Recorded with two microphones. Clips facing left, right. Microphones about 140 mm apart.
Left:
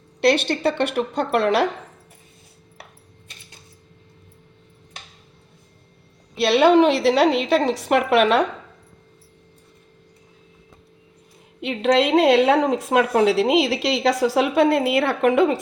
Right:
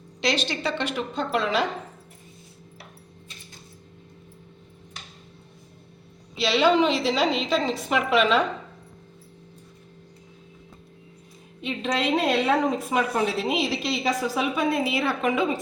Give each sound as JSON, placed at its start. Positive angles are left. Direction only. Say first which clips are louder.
{"t": 0.2, "sound": "a woman's voice", "louder": "left 8 dB", "side_deg": 60}
{"t": 6.3, "sound": "a woman's voice", "louder": "left 6 dB", "side_deg": 60}
{"t": 11.6, "sound": "a woman's voice", "louder": "left 8 dB", "side_deg": 75}